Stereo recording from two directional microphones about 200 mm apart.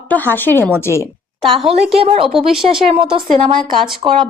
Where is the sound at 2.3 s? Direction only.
Centre (ahead or behind).